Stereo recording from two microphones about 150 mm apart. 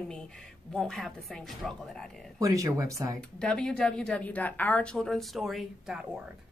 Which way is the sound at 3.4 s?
5° left (ahead or behind).